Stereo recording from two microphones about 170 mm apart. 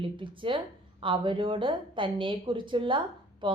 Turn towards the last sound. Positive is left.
turn(degrees=-30)  # may be behind; listen again after turning